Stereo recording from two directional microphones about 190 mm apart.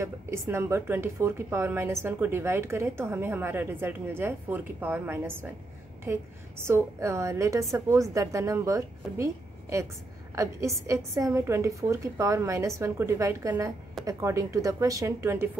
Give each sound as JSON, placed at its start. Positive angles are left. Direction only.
{"t": 0.0, "sound": "a woman's voice", "side_deg": -15}
{"t": 6.6, "sound": "a woman's voice", "side_deg": -15}